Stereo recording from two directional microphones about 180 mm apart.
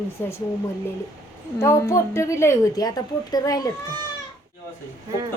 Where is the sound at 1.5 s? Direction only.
15° left (ahead or behind).